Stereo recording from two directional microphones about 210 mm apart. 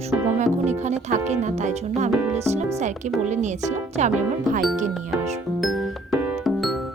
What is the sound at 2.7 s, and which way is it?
A woman's voice, 35° right (ahead or behind).